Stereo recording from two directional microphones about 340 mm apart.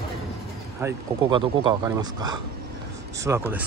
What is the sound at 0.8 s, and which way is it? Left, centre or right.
Speech, centre.